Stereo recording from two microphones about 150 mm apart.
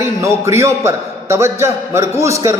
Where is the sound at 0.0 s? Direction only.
20° right (ahead or behind).